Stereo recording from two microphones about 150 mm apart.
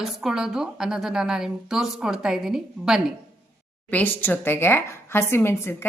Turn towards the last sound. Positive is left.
turn(degrees=15)  # may be behind; listen again after turning